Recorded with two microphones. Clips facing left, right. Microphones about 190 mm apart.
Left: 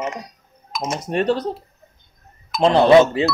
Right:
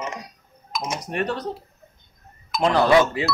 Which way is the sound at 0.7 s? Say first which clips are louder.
Left 3 dB; centre (ahead or behind).